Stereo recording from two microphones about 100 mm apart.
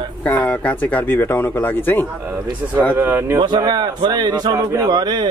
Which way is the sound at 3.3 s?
45° right (ahead or behind).